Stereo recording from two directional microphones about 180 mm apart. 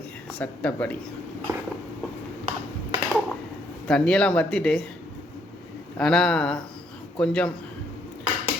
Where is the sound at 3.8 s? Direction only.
5° left (ahead or behind).